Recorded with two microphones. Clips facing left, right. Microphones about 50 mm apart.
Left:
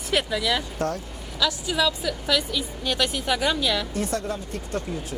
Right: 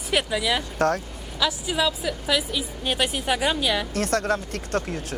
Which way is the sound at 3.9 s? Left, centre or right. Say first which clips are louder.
Right 4 dB; right.